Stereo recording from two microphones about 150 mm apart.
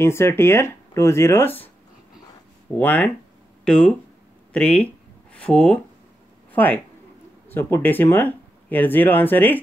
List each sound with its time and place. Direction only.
0.0 s speech: 15° left (ahead or behind)
2.8 s speech: 10° left (ahead or behind)